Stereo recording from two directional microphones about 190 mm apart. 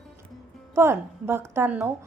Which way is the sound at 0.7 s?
15° right (ahead or behind).